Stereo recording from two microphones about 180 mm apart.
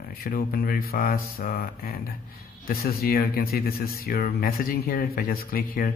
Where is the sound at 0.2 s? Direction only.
55° left (ahead or behind).